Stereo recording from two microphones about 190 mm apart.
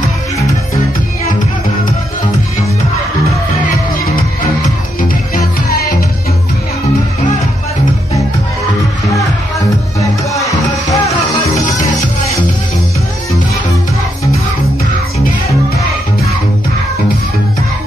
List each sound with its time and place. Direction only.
5.0 s music: 50° left (ahead or behind)
10.3 s music: 15° left (ahead or behind)